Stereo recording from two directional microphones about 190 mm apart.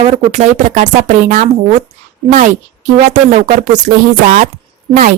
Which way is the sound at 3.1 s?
40° right (ahead or behind).